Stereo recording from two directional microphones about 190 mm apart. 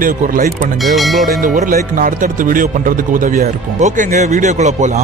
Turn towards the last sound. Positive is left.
turn(degrees=-35)  # may be behind; listen again after turning